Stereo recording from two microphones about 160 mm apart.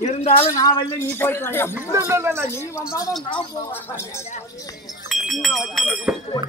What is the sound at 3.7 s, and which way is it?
Speech, 15° left (ahead or behind).